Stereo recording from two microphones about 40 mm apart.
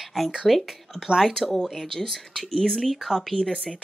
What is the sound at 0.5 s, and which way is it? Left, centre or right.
A woman's voice, centre.